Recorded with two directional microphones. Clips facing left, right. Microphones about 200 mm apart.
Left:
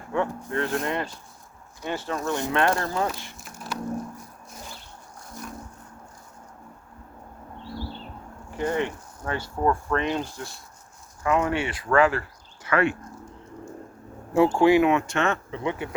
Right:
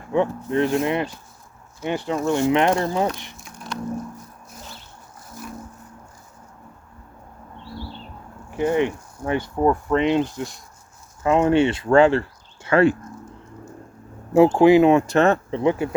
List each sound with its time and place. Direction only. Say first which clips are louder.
0.1 s speech: right 6 dB; 20° right (ahead or behind)
3.3 s a sound: right 1 dB; centre (ahead or behind)
8.4 s speech: right 6 dB; 15° right (ahead or behind); by 13.0 s 30° right (ahead or behind)
14.3 s speech: right 5 dB; 25° right (ahead or behind)